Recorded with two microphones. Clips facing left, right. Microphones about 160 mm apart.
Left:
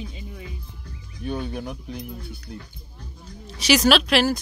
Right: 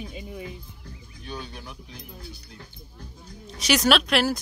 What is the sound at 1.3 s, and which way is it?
Speech, 55° left (ahead or behind).